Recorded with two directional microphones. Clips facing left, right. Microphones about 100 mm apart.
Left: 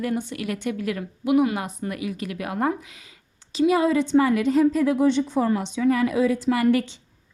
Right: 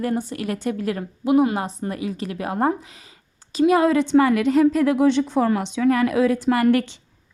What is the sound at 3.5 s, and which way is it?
A woman's voice, 50° right (ahead or behind).